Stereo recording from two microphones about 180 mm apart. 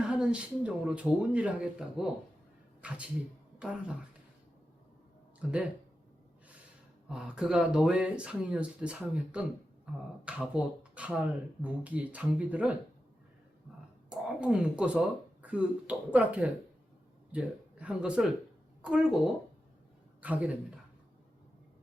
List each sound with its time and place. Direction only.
0.0 s speech: 5° right (ahead or behind)
5.4 s speech: 5° right (ahead or behind)
7.1 s speech: 5° right (ahead or behind)
14.1 s a woman's voice: 5° right (ahead or behind)
20.2 s speech: 10° right (ahead or behind)